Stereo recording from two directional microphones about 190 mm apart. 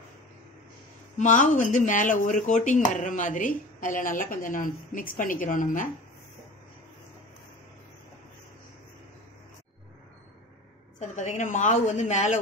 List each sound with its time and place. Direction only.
1.1 s speech: 40° left (ahead or behind)
11.0 s a woman's voice: 40° left (ahead or behind)